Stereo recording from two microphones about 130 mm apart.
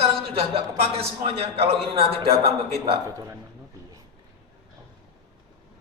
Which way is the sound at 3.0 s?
25° right (ahead or behind).